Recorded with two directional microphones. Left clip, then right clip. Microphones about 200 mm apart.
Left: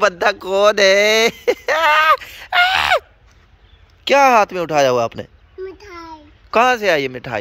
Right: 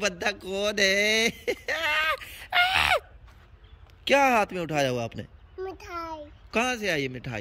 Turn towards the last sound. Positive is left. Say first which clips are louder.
# left 12 dB
turn(degrees=-10)  # may be behind; listen again after turning